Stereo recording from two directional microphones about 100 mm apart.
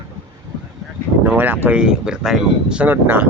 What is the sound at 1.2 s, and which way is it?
Speech, 20° right (ahead or behind).